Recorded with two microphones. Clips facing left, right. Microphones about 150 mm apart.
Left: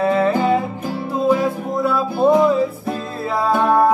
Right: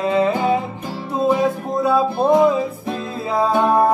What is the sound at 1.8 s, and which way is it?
Music, 20° right (ahead or behind).